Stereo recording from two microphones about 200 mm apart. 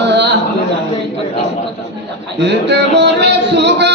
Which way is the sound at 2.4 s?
60° right (ahead or behind).